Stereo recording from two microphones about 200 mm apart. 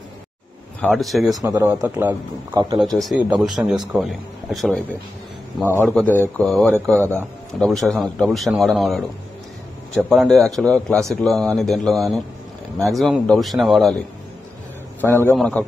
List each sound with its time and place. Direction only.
0.7 s speech: 5° left (ahead or behind)
1.4 s speech: 15° right (ahead or behind)
2.8 s a man's voice: centre (ahead or behind)
15.0 s a man's voice: 10° left (ahead or behind)